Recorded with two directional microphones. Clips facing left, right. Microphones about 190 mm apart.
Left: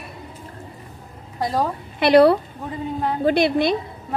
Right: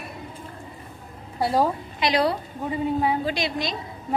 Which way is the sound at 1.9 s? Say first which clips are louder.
Left 11 dB; 60° left (ahead or behind).